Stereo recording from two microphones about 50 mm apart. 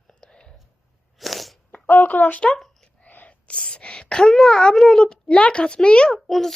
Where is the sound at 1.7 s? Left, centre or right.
Left.